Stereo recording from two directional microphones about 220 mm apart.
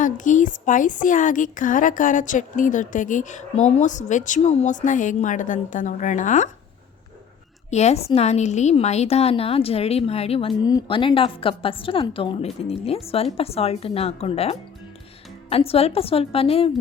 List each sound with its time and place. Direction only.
0.0 s a woman's voice: 35° left (ahead or behind)
7.7 s a woman's voice: 30° left (ahead or behind)